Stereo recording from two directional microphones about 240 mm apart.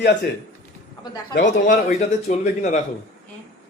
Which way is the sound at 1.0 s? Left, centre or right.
Centre.